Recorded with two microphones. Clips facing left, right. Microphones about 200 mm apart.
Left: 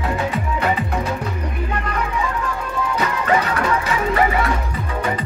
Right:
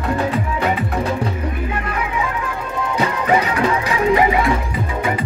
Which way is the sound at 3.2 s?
10° right (ahead or behind).